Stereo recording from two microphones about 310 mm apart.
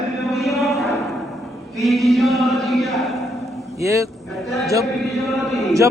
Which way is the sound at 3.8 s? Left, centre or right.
Centre.